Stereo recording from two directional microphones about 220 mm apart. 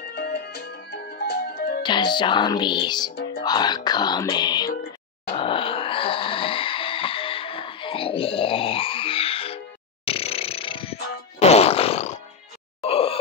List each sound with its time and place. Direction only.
0.1 s music: 50° left (ahead or behind)
1.8 s music: 20° left (ahead or behind)
5.3 s wail: 25° left (ahead or behind)
10.0 s fart: 25° left (ahead or behind)
12.8 s a sound: 25° left (ahead or behind)